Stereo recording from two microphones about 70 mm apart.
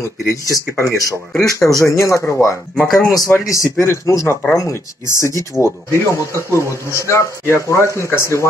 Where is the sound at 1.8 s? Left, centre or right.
Left.